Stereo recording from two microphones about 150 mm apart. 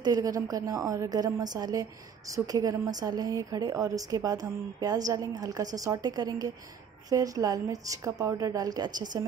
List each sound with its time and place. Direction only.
0.0 s a woman's voice: 25° right (ahead or behind)